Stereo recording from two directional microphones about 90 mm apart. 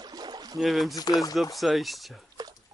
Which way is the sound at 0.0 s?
50° right (ahead or behind).